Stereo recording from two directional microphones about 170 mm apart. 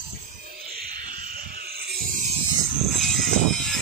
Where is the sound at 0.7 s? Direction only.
60° right (ahead or behind).